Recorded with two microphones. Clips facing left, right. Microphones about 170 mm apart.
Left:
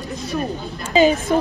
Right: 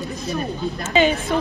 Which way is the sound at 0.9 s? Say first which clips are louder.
Left 4 dB; 40° left (ahead or behind).